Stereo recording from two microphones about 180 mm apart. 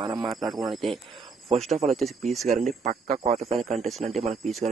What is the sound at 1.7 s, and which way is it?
Speech, 40° right (ahead or behind).